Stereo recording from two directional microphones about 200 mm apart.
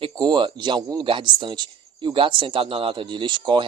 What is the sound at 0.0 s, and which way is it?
Speech, 20° right (ahead or behind).